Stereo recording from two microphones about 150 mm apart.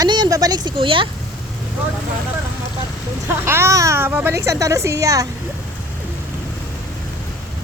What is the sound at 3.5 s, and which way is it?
A child's voice, 20° right (ahead or behind).